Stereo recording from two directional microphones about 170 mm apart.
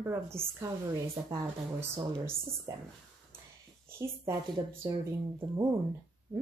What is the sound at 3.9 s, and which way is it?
Speech, 15° right (ahead or behind).